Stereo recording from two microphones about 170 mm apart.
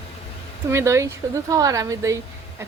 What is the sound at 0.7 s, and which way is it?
Speech, 15° right (ahead or behind).